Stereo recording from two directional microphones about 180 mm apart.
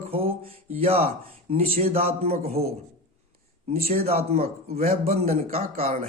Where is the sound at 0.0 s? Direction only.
35° right (ahead or behind).